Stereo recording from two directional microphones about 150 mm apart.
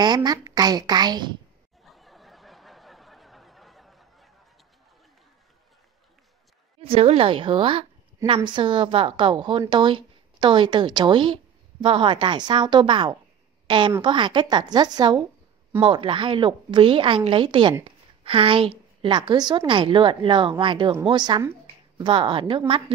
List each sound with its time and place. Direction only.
0.0 s a woman's voice: 25° right (ahead or behind)
1.9 s a sound: centre (ahead or behind)
6.8 s a woman's voice: 40° right (ahead or behind)